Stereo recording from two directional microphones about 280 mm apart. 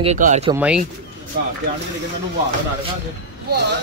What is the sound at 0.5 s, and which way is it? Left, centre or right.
Speech, centre.